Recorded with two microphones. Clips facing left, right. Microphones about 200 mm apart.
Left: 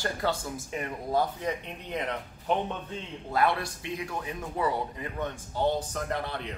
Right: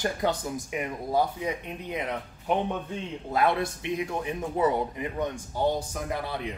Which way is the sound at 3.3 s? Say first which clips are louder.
Right 2 dB; 20° right (ahead or behind).